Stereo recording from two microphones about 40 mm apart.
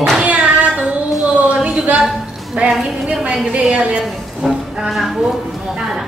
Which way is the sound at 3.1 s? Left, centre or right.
Right.